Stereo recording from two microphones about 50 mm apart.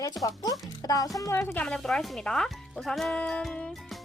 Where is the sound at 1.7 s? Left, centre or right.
Centre.